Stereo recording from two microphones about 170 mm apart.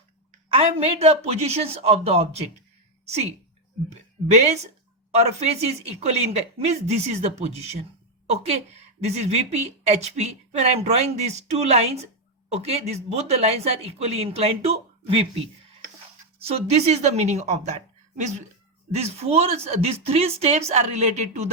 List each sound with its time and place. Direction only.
0.4 s speech: 35° right (ahead or behind)
4.3 s speech: 40° right (ahead or behind)
16.4 s speech: 35° right (ahead or behind)